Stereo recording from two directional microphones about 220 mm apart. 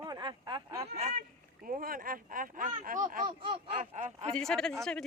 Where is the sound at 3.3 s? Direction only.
25° right (ahead or behind).